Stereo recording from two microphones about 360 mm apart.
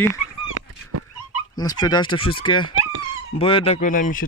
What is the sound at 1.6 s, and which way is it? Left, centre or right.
Speech, centre.